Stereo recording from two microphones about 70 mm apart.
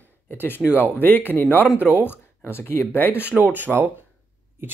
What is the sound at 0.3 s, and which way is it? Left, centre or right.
Speech, left.